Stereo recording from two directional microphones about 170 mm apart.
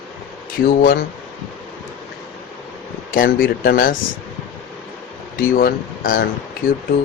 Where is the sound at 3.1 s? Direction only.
55° left (ahead or behind).